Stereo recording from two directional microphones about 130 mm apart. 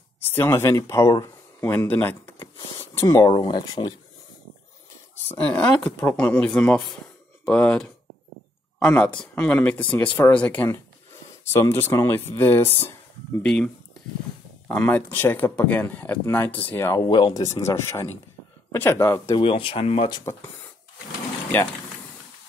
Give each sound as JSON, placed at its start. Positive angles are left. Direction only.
{"t": 0.2, "sound": "speech", "side_deg": 20}
{"t": 1.6, "sound": "speech", "side_deg": 20}
{"t": 3.3, "sound": "speech", "side_deg": 35}
{"t": 5.3, "sound": "speech", "side_deg": 10}
{"t": 13.4, "sound": "speech", "side_deg": 5}
{"t": 14.7, "sound": "speech", "side_deg": 15}
{"t": 16.9, "sound": "speech", "side_deg": 35}
{"t": 19.3, "sound": "speech", "side_deg": 40}